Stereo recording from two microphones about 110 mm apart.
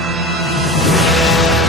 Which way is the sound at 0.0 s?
Centre (ahead or behind).